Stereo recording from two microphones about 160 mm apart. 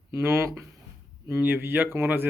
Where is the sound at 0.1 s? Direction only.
15° right (ahead or behind).